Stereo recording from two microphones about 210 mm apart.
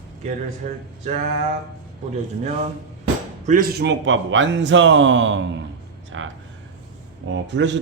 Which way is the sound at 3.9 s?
60° right (ahead or behind).